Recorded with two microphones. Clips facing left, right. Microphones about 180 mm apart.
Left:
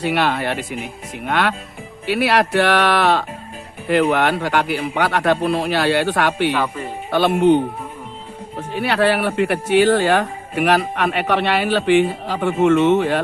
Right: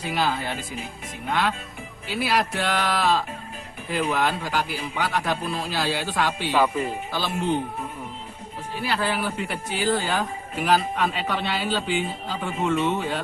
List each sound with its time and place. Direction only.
0.0 s speech: 70° left (ahead or behind)
6.5 s speech: 10° right (ahead or behind)
7.1 s speech: 65° left (ahead or behind)
8.7 s speech: 65° left (ahead or behind)